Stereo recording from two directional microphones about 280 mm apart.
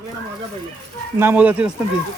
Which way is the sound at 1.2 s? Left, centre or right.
Centre.